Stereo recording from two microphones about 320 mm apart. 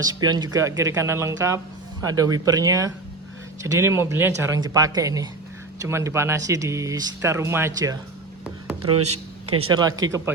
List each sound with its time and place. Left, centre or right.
0.0 s speech: centre
8.9 s speech: right
9.7 s speech: centre